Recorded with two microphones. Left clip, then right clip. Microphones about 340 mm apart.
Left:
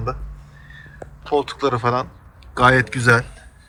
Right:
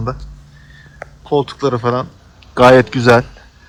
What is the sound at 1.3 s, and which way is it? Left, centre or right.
Speech, centre.